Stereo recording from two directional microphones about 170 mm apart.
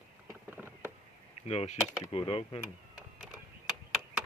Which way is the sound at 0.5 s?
10° right (ahead or behind).